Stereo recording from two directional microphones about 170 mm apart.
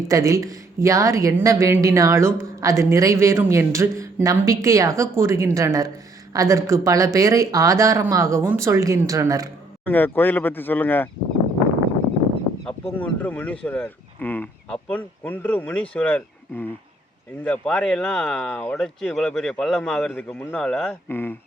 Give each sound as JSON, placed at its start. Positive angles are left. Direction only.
{"t": 0.1, "sound": "speech", "side_deg": -20}
{"t": 9.8, "sound": "speech", "side_deg": 10}
{"t": 12.6, "sound": "speech", "side_deg": 10}